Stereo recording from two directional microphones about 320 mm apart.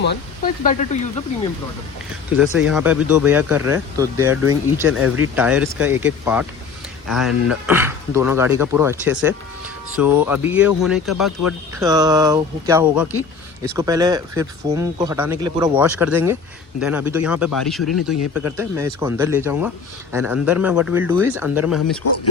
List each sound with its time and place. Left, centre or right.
0.0 s speech: left
2.3 s speech: centre
11.8 s speech: centre